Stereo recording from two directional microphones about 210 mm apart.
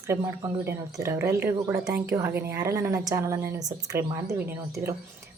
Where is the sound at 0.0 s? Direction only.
15° right (ahead or behind).